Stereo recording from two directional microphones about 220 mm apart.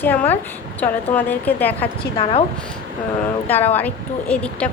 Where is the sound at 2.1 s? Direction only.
25° left (ahead or behind).